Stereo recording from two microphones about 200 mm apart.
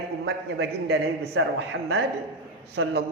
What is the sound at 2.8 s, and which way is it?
Speech, 80° right.